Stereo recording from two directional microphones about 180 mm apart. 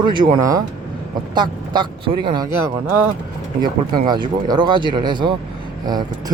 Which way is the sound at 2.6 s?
15° right (ahead or behind).